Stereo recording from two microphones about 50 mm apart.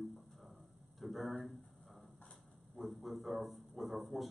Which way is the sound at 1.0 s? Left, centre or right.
Centre.